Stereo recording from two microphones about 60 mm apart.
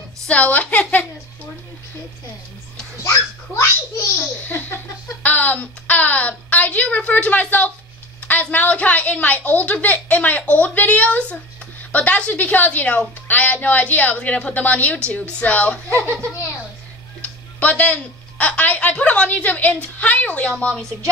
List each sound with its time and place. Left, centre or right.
0.3 s a woman's voice: left
3.0 s a child's voice: left
4.5 s a sound: left
5.2 s a woman's voice: left
17.2 s a woman's voice: left